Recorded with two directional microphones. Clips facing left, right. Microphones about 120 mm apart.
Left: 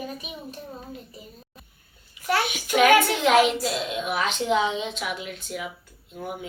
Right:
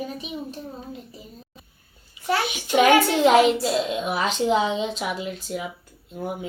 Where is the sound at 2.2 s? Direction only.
25° right (ahead or behind).